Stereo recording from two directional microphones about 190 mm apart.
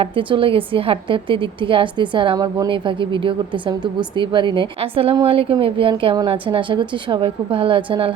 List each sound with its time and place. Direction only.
0.0 s a woman's voice: 25° right (ahead or behind)